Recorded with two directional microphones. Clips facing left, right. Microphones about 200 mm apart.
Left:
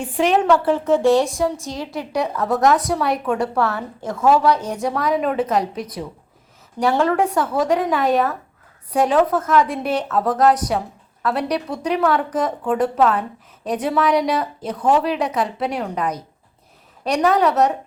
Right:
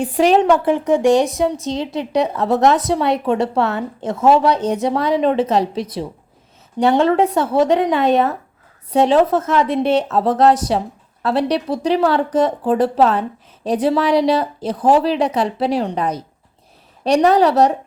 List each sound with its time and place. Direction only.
0.0 s a woman's voice: 35° right (ahead or behind)
0.4 s a woman's voice: 15° right (ahead or behind); by 17.7 s 30° right (ahead or behind)